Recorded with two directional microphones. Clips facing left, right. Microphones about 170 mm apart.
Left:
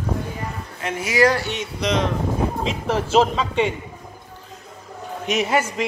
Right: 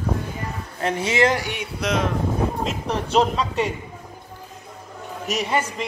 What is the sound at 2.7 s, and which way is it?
A man's voice, 5° left (ahead or behind).